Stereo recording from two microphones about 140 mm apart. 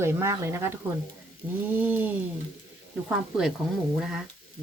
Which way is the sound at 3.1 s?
5° right (ahead or behind).